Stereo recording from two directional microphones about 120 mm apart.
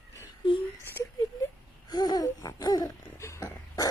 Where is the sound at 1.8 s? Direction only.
35° left (ahead or behind).